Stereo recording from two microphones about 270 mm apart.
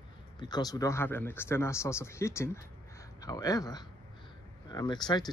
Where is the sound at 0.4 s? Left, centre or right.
Centre.